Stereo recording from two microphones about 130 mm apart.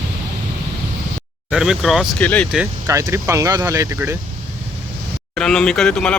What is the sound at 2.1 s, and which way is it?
Speech, 10° left (ahead or behind).